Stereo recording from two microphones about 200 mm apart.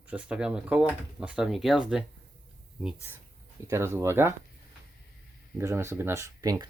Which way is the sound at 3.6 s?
15° right (ahead or behind).